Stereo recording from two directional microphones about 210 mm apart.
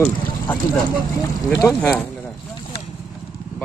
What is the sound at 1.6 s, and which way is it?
Speech, 5° left (ahead or behind).